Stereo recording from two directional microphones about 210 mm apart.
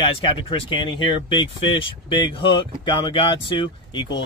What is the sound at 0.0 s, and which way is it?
Speech, 25° left (ahead or behind).